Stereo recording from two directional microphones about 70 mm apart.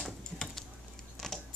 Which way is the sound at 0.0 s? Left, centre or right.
Centre.